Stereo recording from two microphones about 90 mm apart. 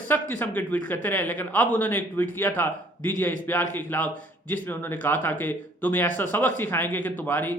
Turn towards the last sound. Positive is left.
turn(degrees=20)  # may be behind; listen again after turning